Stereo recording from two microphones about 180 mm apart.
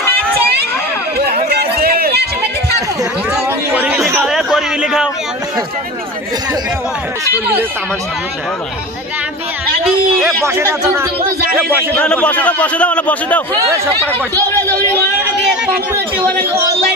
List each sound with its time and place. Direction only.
1.5 s run: 60° right (ahead or behind)
3.3 s chatter: 5° right (ahead or behind)
4.3 s a sound: centre (ahead or behind)
9.8 s speech: centre (ahead or behind)
10.4 s speech: 15° right (ahead or behind)
11.9 s speech: 5° left (ahead or behind)
14.5 s speech: 10° left (ahead or behind)
15.4 s a sound: 5° right (ahead or behind)